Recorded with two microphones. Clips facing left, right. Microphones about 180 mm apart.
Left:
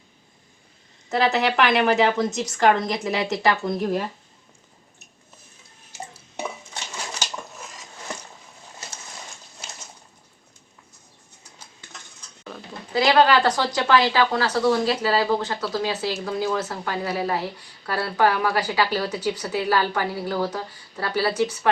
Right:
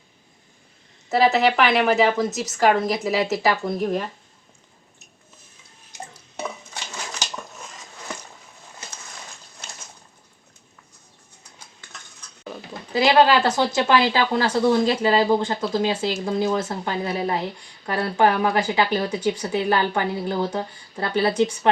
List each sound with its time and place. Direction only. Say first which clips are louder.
1.1 s a woman's voice: right 3 dB; centre (ahead or behind)
12.5 s speech: right 2 dB; 15° right (ahead or behind)
15.6 s speech: right 3 dB; 15° right (ahead or behind)